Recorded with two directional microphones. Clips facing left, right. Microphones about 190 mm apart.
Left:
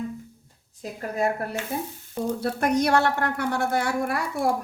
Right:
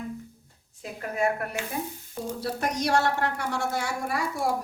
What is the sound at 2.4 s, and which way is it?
A woman's voice, 55° left (ahead or behind).